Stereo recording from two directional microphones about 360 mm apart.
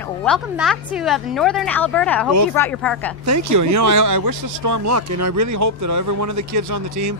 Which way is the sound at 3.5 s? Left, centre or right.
Right.